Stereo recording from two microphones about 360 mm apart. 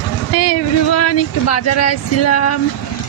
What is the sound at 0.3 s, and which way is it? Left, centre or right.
Speech, left.